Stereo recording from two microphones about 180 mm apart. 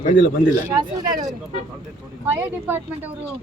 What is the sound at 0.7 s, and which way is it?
Speech, 20° right (ahead or behind).